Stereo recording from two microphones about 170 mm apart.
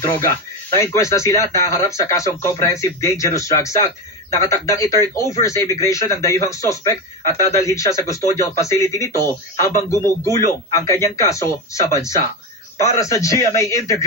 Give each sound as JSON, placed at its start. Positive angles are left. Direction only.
{"t": 0.7, "sound": "speech", "side_deg": 15}